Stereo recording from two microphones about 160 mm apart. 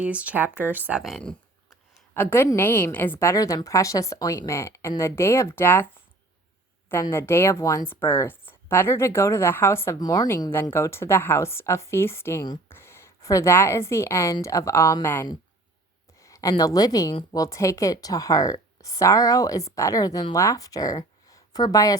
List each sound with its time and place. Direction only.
0.0 s a woman's voice: 10° right (ahead or behind); by 5.9 s 15° left (ahead or behind)
6.9 s a woman's voice: 15° left (ahead or behind)